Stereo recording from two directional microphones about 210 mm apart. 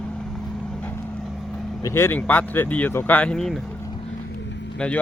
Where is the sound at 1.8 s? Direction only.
10° left (ahead or behind).